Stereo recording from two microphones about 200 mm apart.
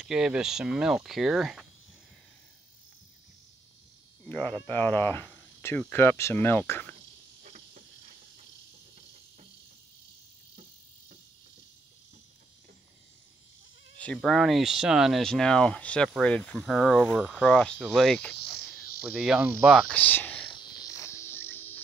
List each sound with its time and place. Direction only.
0.0 s speech: 5° right (ahead or behind)
4.2 s speech: 10° left (ahead or behind)
7.4 s cricket: 40° right (ahead or behind)
13.9 s speech: 5° left (ahead or behind)
20.8 s cricket: 15° left (ahead or behind)